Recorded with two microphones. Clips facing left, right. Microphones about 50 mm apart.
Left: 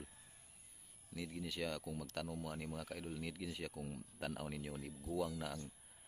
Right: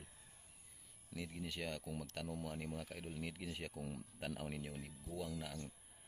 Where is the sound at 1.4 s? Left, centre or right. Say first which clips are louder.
Left 3 dB; right.